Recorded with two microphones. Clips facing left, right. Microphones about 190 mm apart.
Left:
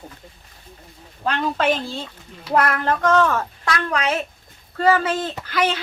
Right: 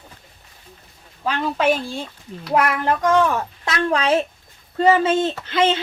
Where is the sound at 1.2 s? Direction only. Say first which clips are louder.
Right 1 dB; 5° right (ahead or behind).